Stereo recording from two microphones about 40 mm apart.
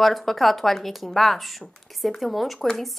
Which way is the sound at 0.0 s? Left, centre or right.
Centre.